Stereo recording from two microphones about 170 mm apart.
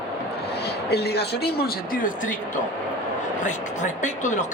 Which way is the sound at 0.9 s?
70° left (ahead or behind).